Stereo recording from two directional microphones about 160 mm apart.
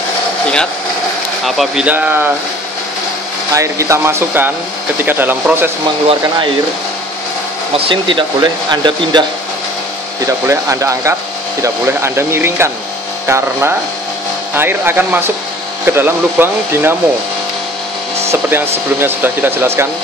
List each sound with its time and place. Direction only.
1.4 s speech: centre (ahead or behind)
3.5 s speech: 20° right (ahead or behind)
7.7 s speech: 30° right (ahead or behind)
10.2 s speech: 20° right (ahead or behind)
18.3 s speech: 15° right (ahead or behind)